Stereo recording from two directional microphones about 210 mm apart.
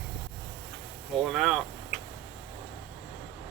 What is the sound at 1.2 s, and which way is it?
Speech, centre (ahead or behind).